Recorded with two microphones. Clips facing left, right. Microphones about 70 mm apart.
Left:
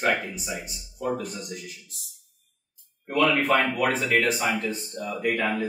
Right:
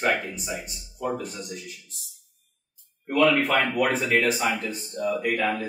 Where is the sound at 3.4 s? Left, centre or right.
Left.